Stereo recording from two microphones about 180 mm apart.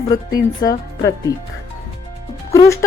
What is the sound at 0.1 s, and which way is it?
Speech, 20° left (ahead or behind).